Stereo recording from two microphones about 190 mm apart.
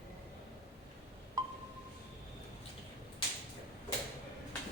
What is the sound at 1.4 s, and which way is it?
Wind chime, 20° right (ahead or behind).